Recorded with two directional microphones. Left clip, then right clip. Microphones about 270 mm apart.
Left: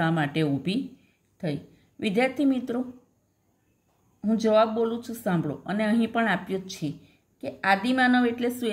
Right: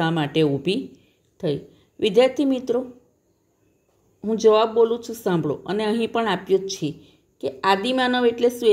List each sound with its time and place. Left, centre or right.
0.0 s speech: centre
2.0 s speech: centre
4.2 s speech: centre